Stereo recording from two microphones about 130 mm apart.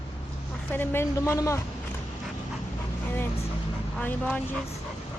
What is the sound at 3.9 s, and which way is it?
Speech, 10° left (ahead or behind).